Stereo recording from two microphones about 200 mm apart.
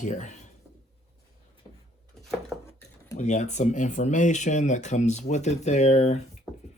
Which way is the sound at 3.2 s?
35° left (ahead or behind).